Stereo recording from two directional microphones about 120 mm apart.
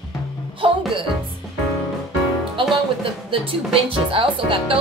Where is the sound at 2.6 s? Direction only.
45° right (ahead or behind).